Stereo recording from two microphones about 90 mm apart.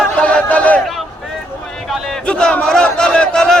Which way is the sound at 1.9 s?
Centre (ahead or behind).